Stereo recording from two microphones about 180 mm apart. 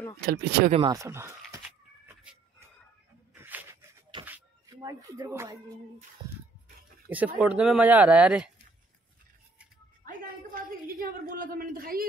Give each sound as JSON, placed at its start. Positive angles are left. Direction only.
{"t": 0.2, "sound": "speech", "side_deg": -60}
{"t": 0.8, "sound": "speech", "side_deg": -15}
{"t": 3.3, "sound": "a sound", "side_deg": -10}
{"t": 4.3, "sound": "music", "side_deg": -20}
{"t": 7.1, "sound": "speech", "side_deg": -10}
{"t": 10.0, "sound": "a sound", "side_deg": -50}